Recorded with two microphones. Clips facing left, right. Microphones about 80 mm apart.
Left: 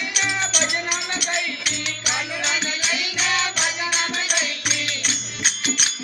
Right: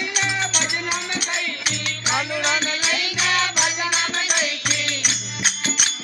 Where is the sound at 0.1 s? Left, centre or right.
Right.